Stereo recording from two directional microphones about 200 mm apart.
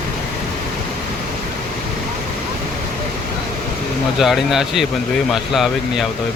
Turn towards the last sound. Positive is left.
turn(degrees=0)  # may be behind; listen again after turning